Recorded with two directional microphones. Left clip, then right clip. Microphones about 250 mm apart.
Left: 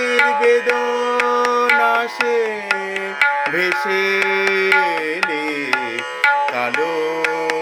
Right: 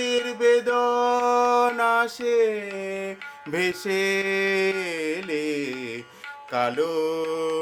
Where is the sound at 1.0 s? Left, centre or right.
Centre.